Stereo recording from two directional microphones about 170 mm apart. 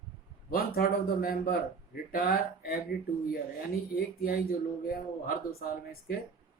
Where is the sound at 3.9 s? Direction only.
60° left (ahead or behind).